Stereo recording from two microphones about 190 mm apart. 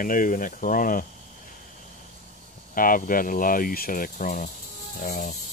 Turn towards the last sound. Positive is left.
turn(degrees=45)  # may be behind; listen again after turning